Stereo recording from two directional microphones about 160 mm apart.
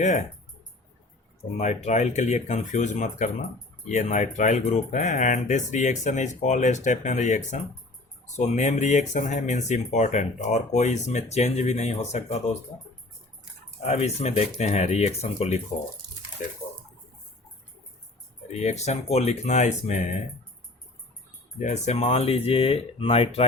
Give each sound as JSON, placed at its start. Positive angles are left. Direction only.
{"t": 0.0, "sound": "speech", "side_deg": 50}
{"t": 1.5, "sound": "speech", "side_deg": 45}
{"t": 13.8, "sound": "speech", "side_deg": 40}
{"t": 18.5, "sound": "speech", "side_deg": 45}
{"t": 21.6, "sound": "speech", "side_deg": 45}